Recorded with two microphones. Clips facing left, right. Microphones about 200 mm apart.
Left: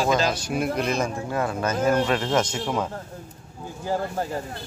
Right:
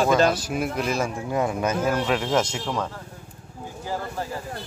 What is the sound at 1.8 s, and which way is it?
Speech, 5° right (ahead or behind).